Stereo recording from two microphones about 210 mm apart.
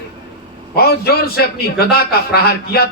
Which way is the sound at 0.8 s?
50° left (ahead or behind).